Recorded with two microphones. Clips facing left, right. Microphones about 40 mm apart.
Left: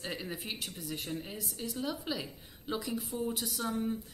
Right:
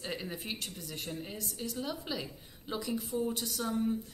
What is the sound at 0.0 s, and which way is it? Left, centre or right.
A woman's voice, centre.